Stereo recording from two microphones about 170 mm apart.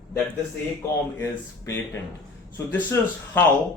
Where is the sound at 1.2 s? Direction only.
15° left (ahead or behind).